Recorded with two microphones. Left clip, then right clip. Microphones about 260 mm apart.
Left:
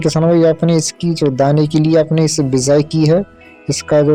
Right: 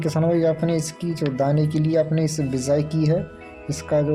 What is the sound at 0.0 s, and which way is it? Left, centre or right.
Speech, left.